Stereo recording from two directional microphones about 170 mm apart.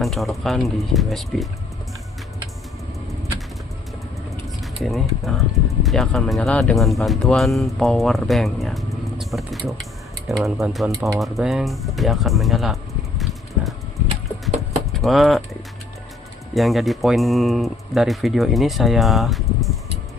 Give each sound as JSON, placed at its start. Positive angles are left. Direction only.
{"t": 0.0, "sound": "speech", "side_deg": 0}
{"t": 4.6, "sound": "speech", "side_deg": 0}
{"t": 14.9, "sound": "speech", "side_deg": 0}
{"t": 16.6, "sound": "speech", "side_deg": 0}